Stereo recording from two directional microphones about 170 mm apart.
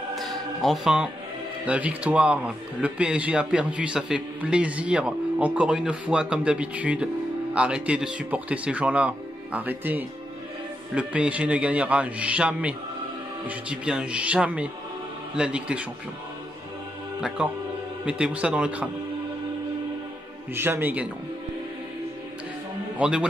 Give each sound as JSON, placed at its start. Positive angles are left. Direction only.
{"t": 0.1, "sound": "choir", "side_deg": 0}
{"t": 1.7, "sound": "a man's voice", "side_deg": -10}
{"t": 17.4, "sound": "a man's voice", "side_deg": -5}
{"t": 20.5, "sound": "a man's voice", "side_deg": -15}
{"t": 22.9, "sound": "a man's voice", "side_deg": -5}